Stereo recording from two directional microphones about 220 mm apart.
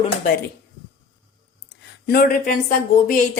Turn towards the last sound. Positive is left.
turn(degrees=35)  # may be behind; listen again after turning